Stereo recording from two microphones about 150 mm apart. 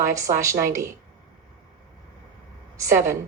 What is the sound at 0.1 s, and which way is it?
Speech, 20° right (ahead or behind).